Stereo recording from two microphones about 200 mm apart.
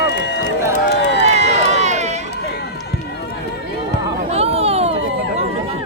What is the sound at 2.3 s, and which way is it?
Run, 55° left (ahead or behind).